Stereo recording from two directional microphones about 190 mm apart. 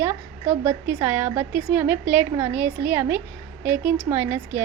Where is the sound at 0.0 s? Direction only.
10° right (ahead or behind).